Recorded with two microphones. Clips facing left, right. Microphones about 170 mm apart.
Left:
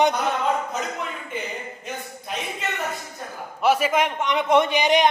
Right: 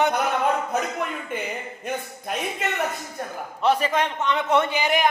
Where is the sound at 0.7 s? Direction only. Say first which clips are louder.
Right 4 dB; 60° right (ahead or behind).